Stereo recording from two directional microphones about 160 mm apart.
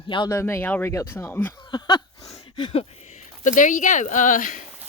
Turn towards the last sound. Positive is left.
turn(degrees=55)  # may be behind; listen again after turning